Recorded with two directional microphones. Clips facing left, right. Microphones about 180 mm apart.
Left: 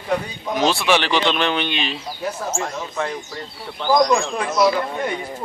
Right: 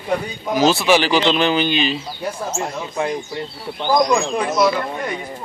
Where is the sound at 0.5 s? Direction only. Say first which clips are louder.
Right 3 dB; centre (ahead or behind).